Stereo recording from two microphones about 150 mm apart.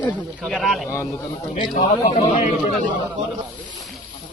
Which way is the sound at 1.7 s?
45° left (ahead or behind).